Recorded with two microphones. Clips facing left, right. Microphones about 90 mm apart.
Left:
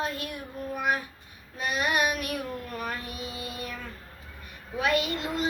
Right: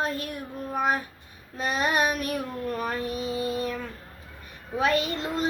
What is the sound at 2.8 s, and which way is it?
Speech, 35° right (ahead or behind).